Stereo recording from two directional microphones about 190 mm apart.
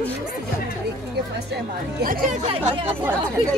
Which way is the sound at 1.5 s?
50° right (ahead or behind).